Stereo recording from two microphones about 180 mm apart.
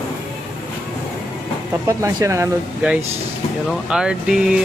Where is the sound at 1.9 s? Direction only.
15° right (ahead or behind).